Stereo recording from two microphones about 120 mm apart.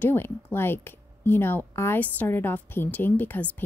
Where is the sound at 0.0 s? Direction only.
20° left (ahead or behind).